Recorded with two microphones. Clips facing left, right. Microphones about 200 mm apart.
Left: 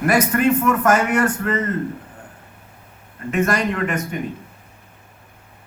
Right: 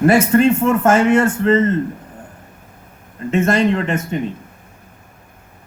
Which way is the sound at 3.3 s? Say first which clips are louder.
Right 5 dB; 25° right (ahead or behind).